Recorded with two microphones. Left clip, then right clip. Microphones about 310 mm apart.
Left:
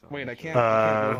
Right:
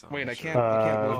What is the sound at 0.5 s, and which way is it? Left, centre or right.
Speech, left.